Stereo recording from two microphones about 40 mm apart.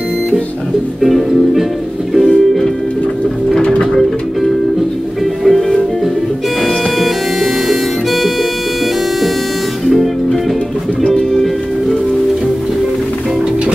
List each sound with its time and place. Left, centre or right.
1.0 s music: centre
2.2 s music: centre
3.6 s music: left
5.4 s music: centre
7.6 s music: centre
11.1 s music: centre